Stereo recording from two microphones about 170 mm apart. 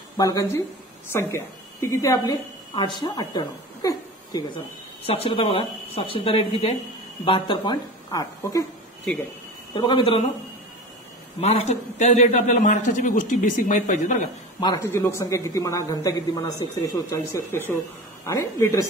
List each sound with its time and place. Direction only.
0.2 s a woman's voice: 20° left (ahead or behind)
5.0 s speech: 35° left (ahead or behind)
9.8 s speech: 30° left (ahead or behind)
11.4 s a man's voice: 40° left (ahead or behind)
14.6 s speech: 20° left (ahead or behind)